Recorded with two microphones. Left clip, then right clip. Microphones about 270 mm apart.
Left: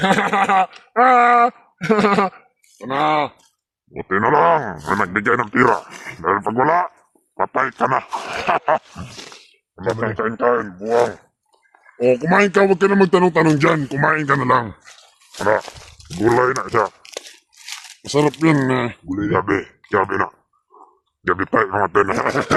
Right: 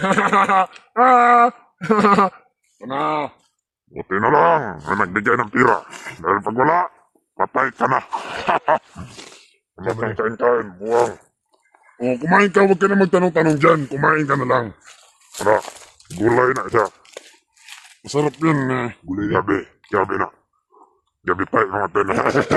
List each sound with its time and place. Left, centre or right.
0.0 s speech: left
2.7 s speech: left
3.9 s speech: centre
5.9 s speech: centre
6.2 s speech: centre
12.0 s speech: left
15.4 s speech: centre
15.6 s speech: centre
17.0 s tearing: left
18.0 s speech: centre
19.0 s speech: centre
19.3 s speech: centre